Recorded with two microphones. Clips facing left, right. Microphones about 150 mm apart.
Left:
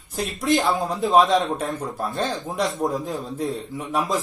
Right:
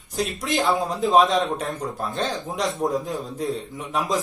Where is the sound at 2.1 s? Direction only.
20° right (ahead or behind).